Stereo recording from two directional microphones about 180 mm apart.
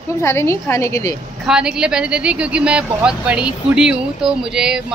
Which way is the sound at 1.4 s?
5° right (ahead or behind).